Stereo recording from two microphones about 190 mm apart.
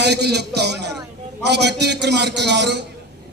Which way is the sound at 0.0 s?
60° right (ahead or behind).